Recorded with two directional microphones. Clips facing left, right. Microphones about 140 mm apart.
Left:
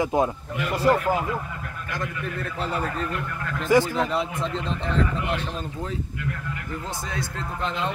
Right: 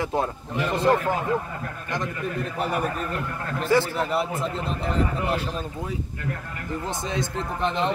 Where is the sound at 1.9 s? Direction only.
20° right (ahead or behind).